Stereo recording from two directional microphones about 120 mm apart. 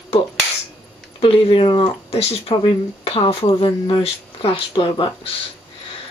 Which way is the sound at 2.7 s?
45° left (ahead or behind).